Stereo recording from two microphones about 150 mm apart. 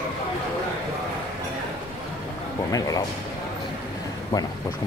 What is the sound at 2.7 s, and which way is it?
Speech, 25° left (ahead or behind).